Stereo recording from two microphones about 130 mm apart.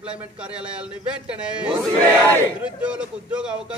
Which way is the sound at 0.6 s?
10° right (ahead or behind).